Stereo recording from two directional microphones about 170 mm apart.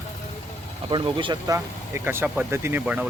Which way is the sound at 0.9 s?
30° right (ahead or behind).